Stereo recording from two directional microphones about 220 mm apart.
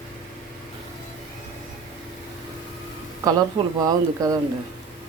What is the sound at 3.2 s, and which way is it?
Speech, 15° right (ahead or behind).